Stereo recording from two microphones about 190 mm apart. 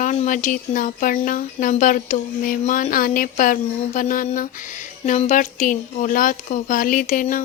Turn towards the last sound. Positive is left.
turn(degrees=45)  # may be behind; listen again after turning